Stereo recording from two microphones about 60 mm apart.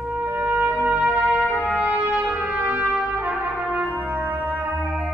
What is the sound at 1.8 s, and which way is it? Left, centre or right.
Brass instrument, right.